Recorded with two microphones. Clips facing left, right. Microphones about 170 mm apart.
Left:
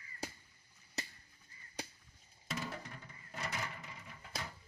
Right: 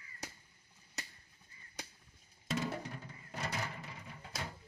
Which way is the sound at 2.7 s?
30° right (ahead or behind).